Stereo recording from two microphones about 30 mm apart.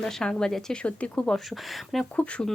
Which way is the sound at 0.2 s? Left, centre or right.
Left.